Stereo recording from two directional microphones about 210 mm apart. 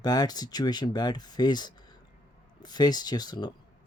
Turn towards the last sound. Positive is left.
turn(degrees=20)  # may be behind; listen again after turning